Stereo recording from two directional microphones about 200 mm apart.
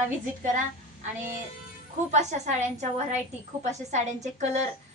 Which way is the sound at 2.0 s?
35° right (ahead or behind).